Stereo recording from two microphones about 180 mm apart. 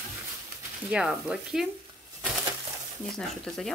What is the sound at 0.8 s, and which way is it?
Speech, 5° right (ahead or behind).